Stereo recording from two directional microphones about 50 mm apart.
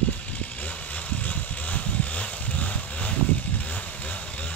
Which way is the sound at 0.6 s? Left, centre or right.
Left.